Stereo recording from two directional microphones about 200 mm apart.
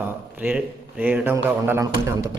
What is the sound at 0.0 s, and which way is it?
A man's voice, 10° right (ahead or behind).